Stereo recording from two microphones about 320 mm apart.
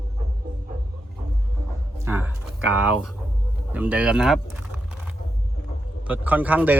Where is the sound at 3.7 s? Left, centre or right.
Centre.